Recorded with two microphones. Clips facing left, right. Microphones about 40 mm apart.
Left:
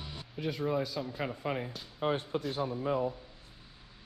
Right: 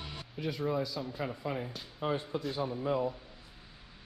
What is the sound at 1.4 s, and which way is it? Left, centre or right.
A man's voice, left.